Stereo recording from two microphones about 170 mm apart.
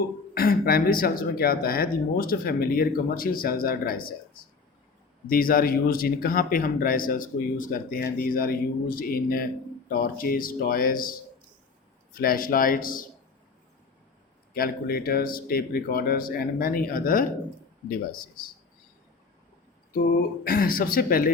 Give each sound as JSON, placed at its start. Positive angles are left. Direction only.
{"t": 0.3, "sound": "speech", "side_deg": 60}
{"t": 5.3, "sound": "speech", "side_deg": 60}
{"t": 12.1, "sound": "speech", "side_deg": 60}
{"t": 14.5, "sound": "speech", "side_deg": 60}
{"t": 20.4, "sound": "speech", "side_deg": 60}